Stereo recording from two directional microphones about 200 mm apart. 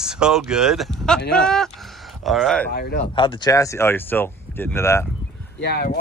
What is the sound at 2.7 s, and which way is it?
Speech, 50° left (ahead or behind).